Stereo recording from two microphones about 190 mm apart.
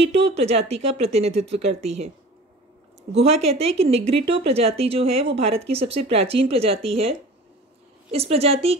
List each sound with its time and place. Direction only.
0.0 s speech: 30° right (ahead or behind)